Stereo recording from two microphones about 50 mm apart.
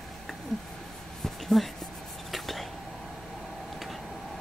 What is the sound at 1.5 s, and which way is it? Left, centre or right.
Speech, centre.